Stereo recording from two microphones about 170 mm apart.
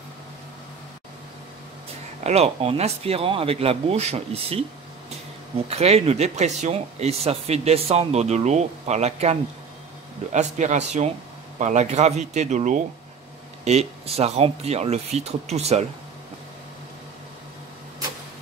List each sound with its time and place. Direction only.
2.2 s speech: 40° right (ahead or behind)
5.7 s a man's voice: 40° right (ahead or behind)